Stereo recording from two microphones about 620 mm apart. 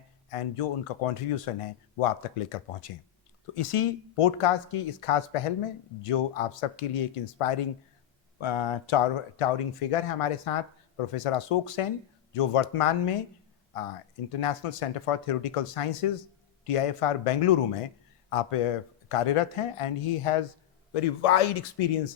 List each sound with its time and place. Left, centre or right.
0.3 s speech: left
9.4 s speech: left
14.3 s speech: left